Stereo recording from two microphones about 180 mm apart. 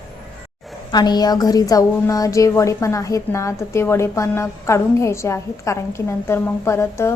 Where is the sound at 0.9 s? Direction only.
25° left (ahead or behind).